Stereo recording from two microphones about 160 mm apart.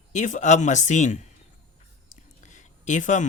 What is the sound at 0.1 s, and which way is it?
Speech, 50° left (ahead or behind).